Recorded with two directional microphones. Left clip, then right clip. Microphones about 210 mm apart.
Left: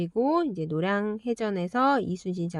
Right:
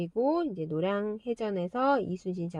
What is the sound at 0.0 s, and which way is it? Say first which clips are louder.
Speech: left 3 dB; 25° left (ahead or behind).